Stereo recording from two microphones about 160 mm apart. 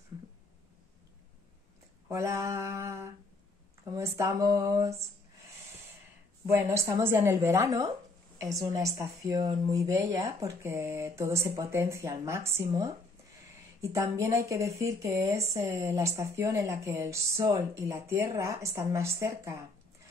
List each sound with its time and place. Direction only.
2.0 s a woman's voice: 15° right (ahead or behind)
6.4 s a woman's voice: 15° right (ahead or behind)